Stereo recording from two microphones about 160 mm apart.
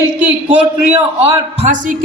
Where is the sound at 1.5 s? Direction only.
45° right (ahead or behind).